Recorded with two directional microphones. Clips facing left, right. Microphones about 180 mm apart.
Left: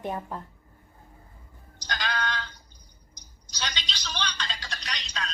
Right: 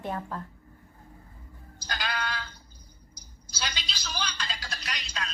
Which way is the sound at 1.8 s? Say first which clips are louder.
Left 2 dB; 5° right (ahead or behind).